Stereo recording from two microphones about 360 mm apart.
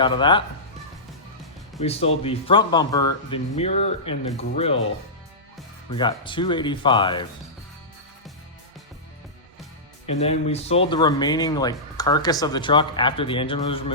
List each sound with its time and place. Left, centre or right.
0.0 s speech: centre
1.8 s speech: centre
5.9 s speech: centre
10.1 s speech: centre